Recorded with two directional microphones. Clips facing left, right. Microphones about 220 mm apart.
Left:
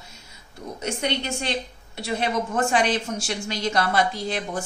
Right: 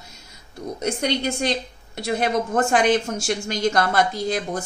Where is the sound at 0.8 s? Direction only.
40° right (ahead or behind).